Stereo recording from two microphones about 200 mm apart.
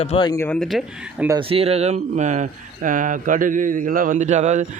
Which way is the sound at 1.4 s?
30° right (ahead or behind).